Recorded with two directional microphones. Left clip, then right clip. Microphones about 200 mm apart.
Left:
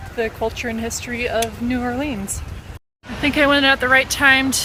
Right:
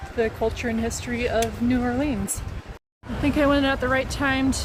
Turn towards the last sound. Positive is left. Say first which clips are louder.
# left 9 dB
turn(degrees=0)  # may be behind; listen again after turning